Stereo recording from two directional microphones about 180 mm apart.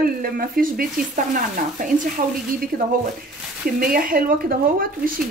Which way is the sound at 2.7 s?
50° right (ahead or behind).